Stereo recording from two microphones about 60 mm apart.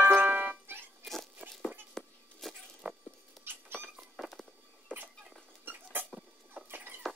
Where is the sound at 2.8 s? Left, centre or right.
Right.